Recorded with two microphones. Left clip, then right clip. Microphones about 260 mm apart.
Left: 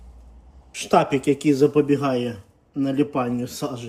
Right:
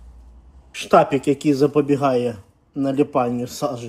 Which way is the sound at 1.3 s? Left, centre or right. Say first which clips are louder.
Even; centre.